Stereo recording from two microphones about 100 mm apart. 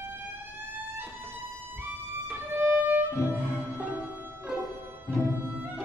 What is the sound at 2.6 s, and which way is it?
Violin, 20° right (ahead or behind).